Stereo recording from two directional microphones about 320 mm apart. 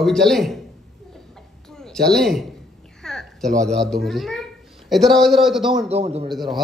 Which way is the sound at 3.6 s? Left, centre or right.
Centre.